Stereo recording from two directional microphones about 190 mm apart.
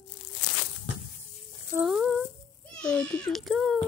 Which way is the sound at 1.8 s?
5° right (ahead or behind).